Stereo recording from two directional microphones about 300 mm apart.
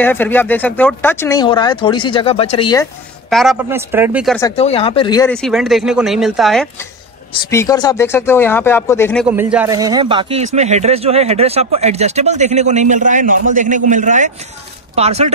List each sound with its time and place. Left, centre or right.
0.0 s speech: centre
3.3 s speech: centre
4.4 s speech: centre
9.3 s a man's voice: centre